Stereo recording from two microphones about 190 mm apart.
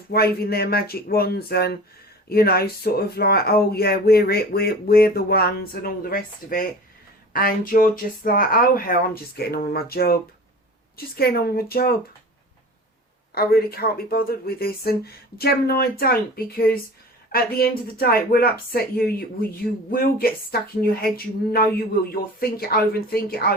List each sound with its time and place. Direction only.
0.1 s speech: 55° left (ahead or behind)
13.3 s speech: 55° left (ahead or behind)
22.1 s speech: 50° left (ahead or behind)